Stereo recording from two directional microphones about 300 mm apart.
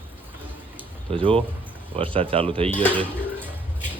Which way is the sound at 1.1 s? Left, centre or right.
Centre.